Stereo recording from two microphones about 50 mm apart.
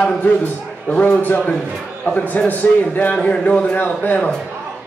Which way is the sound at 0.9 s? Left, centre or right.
Left.